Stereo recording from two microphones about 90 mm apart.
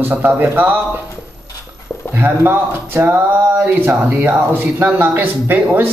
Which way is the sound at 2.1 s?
25° right (ahead or behind).